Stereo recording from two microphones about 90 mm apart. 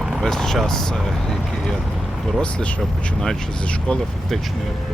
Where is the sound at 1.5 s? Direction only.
5° left (ahead or behind).